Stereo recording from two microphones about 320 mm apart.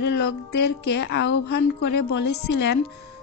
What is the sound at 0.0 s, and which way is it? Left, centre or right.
Speech, left.